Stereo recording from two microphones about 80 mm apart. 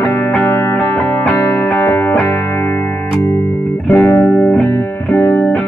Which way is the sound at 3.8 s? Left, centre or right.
Centre.